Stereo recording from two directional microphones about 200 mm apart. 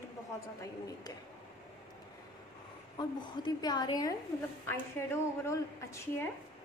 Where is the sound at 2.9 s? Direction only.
20° left (ahead or behind).